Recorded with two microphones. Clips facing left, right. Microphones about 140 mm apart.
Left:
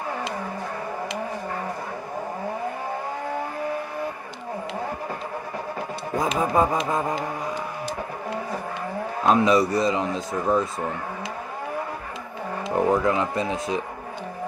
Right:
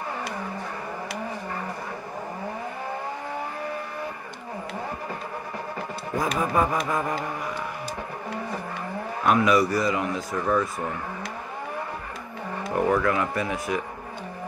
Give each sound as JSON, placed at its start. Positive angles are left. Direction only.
{"t": 6.1, "sound": "a man's voice", "side_deg": 25}
{"t": 9.2, "sound": "a man's voice", "side_deg": 25}
{"t": 12.6, "sound": "a man's voice", "side_deg": 20}